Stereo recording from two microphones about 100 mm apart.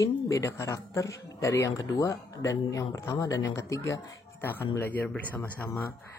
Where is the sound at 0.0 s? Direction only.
30° left (ahead or behind).